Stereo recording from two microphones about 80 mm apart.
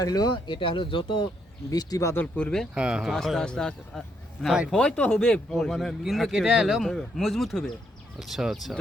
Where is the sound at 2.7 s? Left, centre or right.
Centre.